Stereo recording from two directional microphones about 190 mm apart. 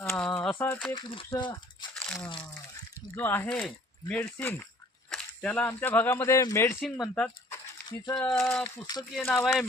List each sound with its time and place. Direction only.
0.1 s a sound: 5° left (ahead or behind)
0.9 s speech: 25° left (ahead or behind)
2.0 s crunch: 5° left (ahead or behind)
2.7 s speech: 10° left (ahead or behind)
7.0 s a sound: 10° left (ahead or behind)
8.2 s speech: 10° left (ahead or behind)
8.6 s speech: 20° left (ahead or behind)
9.1 s speech: centre (ahead or behind)